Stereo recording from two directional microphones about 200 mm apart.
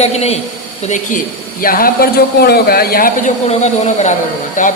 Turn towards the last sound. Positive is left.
turn(degrees=40)  # may be behind; listen again after turning